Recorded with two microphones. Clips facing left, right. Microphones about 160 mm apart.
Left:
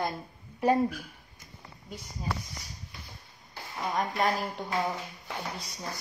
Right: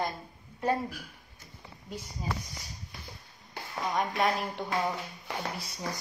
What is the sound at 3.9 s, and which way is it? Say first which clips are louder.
Speech: even; centre (ahead or behind).